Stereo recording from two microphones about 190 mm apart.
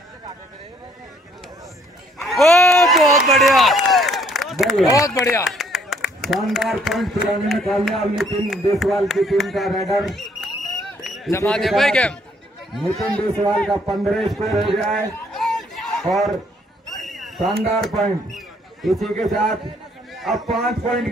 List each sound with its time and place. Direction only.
2.2 s run: centre (ahead or behind)
4.9 s speech: 15° left (ahead or behind)
5.5 s clapping: centre (ahead or behind)
6.2 s a man's voice: centre (ahead or behind)
15.1 s chatter: centre (ahead or behind)
16.9 s a sound: centre (ahead or behind)
18.3 s a man's voice: centre (ahead or behind)